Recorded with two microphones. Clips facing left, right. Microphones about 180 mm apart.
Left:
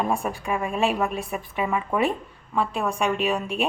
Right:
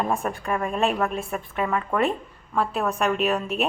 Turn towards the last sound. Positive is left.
turn(degrees=-5)  # may be behind; listen again after turning